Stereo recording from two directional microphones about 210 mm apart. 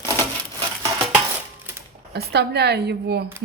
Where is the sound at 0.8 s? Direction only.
10° right (ahead or behind).